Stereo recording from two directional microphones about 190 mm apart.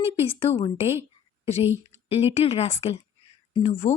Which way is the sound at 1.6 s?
10° right (ahead or behind).